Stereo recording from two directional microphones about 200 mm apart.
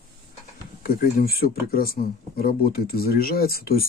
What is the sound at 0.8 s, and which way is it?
Speech, 50° left (ahead or behind).